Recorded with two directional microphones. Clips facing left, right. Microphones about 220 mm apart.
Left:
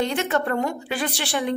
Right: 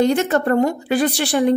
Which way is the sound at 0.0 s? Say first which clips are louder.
Right 7 dB; 40° right (ahead or behind).